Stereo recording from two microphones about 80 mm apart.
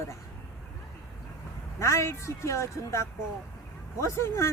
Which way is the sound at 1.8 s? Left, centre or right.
Left.